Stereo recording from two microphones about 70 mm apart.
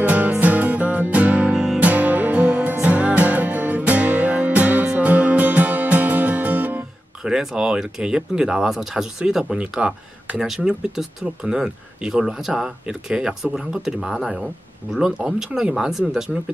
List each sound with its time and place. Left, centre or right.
0.0 s music: right
7.2 s speech: centre